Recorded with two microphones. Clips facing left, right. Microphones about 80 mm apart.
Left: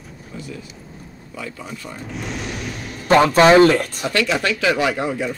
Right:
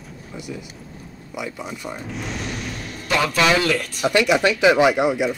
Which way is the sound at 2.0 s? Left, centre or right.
Centre.